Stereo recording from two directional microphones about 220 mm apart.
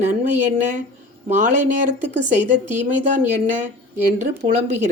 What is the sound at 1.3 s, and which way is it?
A woman's voice, 35° right (ahead or behind).